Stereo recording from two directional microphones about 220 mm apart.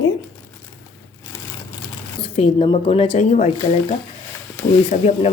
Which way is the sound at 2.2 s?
25° left (ahead or behind).